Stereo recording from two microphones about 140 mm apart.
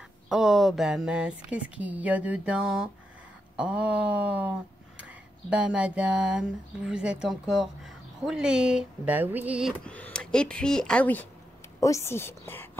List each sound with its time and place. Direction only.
0.3 s speech: 5° right (ahead or behind)
9.8 s a woman's voice: 10° left (ahead or behind)